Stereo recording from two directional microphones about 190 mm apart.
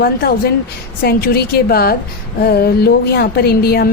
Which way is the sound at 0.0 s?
55° left (ahead or behind).